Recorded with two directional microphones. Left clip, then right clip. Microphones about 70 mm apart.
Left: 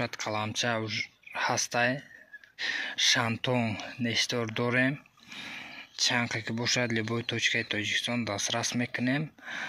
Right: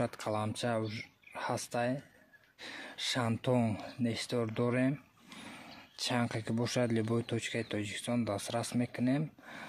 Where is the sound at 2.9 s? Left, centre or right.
Centre.